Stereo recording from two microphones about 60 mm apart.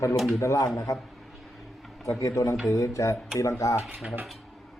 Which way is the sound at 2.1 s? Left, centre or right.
Left.